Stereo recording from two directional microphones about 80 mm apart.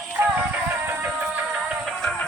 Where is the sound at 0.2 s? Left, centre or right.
Right.